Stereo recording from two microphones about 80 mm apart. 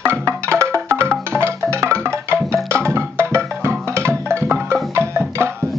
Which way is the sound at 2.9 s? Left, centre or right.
Right.